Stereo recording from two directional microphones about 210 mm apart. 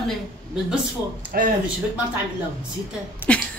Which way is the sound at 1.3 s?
45° right (ahead or behind).